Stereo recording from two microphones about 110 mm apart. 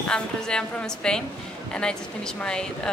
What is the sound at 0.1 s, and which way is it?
A woman's voice, 10° left (ahead or behind).